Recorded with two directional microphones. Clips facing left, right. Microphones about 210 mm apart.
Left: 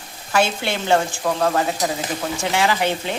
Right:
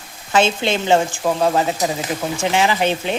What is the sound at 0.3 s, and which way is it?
Speech, 20° right (ahead or behind).